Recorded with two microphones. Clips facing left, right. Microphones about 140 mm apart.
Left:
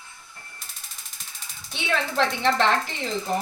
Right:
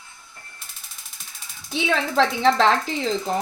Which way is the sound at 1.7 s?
90° right.